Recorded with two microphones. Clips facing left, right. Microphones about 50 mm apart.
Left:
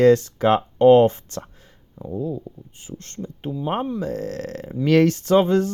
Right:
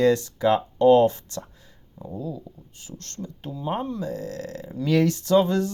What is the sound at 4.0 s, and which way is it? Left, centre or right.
Speech, left.